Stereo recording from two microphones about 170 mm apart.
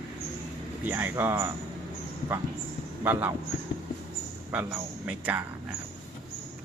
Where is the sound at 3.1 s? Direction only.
10° right (ahead or behind).